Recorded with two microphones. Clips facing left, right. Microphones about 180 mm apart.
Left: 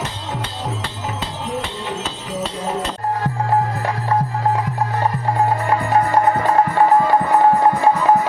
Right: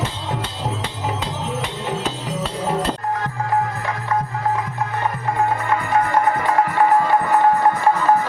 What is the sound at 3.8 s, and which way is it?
Music, 30° left (ahead or behind).